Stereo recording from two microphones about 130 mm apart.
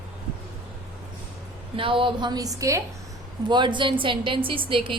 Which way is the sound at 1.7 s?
40° right (ahead or behind).